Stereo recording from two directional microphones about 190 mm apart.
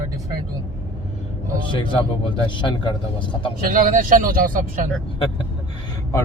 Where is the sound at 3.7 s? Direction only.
45° right (ahead or behind).